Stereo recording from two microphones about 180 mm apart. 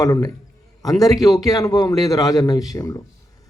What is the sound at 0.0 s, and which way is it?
A man's voice, 20° left (ahead or behind).